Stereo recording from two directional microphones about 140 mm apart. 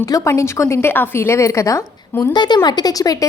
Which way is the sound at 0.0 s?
20° left (ahead or behind).